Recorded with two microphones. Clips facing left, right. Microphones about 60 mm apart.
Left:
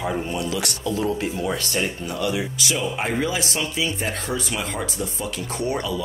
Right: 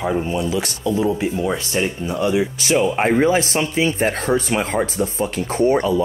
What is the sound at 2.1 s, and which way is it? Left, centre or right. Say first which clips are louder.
Speech: right 7 dB; right.